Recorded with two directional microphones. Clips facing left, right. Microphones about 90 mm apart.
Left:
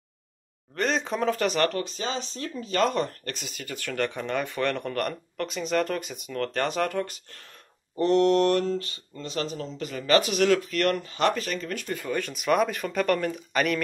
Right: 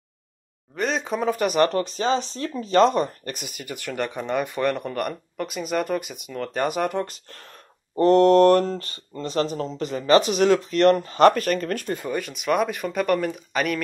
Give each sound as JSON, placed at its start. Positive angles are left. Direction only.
{"t": 0.7, "sound": "speech", "side_deg": -5}
{"t": 1.7, "sound": "speech", "side_deg": -35}
{"t": 7.0, "sound": "speech", "side_deg": -35}
{"t": 11.0, "sound": "speech", "side_deg": -45}
{"t": 12.1, "sound": "speech", "side_deg": -5}